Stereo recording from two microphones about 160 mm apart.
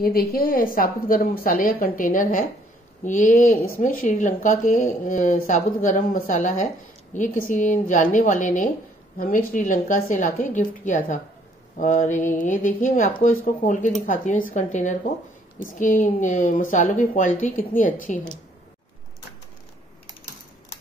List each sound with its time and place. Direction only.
0.0 s a woman's voice: 65° left (ahead or behind)